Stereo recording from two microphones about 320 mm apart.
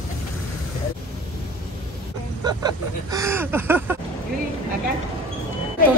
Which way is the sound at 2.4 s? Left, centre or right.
Centre.